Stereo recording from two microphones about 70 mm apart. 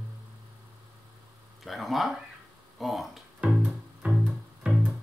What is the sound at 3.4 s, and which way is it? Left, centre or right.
Music, centre.